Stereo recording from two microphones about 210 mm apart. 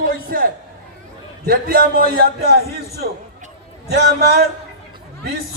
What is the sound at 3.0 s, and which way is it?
A man's voice, 45° right (ahead or behind).